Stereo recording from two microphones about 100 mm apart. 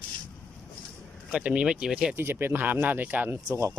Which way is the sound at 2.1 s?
20° right (ahead or behind).